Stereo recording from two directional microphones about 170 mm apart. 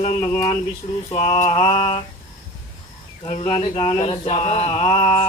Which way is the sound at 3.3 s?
40° left (ahead or behind).